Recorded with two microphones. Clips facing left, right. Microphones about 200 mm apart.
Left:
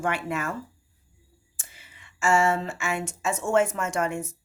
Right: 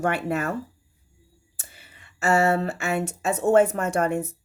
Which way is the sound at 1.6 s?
60° right (ahead or behind).